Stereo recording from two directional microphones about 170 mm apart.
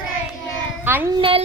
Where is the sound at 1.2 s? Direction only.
30° right (ahead or behind).